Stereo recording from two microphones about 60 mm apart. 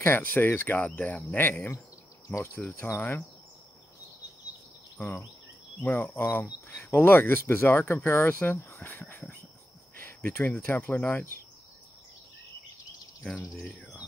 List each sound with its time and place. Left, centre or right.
0.0 s speech: left
1.3 s speech: left
2.2 s insect: left
2.7 s speech: left
5.9 s speech: left
9.9 s cricket: left
10.7 s speech: left
13.2 s speech: centre